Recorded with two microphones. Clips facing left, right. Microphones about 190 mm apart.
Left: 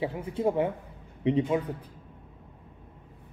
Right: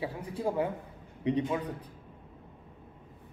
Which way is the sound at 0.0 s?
25° left (ahead or behind).